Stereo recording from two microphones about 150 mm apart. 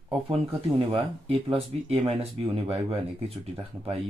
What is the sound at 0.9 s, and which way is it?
Speech, 40° right (ahead or behind).